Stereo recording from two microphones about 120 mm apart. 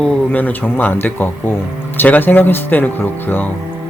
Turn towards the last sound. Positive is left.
turn(degrees=15)  # may be behind; listen again after turning